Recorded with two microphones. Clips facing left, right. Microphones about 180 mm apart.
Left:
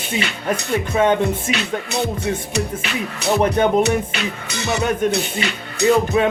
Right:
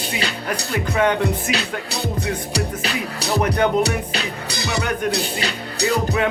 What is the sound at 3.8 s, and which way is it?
Music, 35° right (ahead or behind).